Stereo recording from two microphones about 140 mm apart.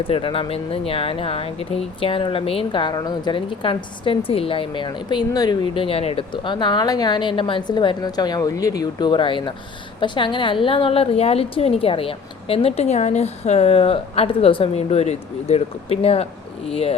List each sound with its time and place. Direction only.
0.0 s a woman's voice: 40° left (ahead or behind)
6.3 s a woman's voice: 35° left (ahead or behind)